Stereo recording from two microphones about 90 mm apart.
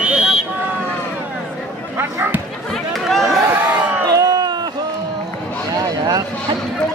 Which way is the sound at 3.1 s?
Centre (ahead or behind).